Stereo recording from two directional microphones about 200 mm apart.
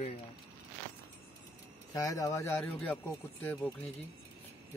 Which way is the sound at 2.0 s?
15° left (ahead or behind).